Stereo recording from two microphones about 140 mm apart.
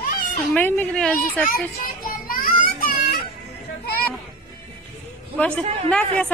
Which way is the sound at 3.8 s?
90° left.